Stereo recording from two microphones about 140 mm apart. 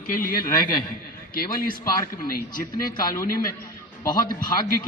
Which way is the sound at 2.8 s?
25° left (ahead or behind).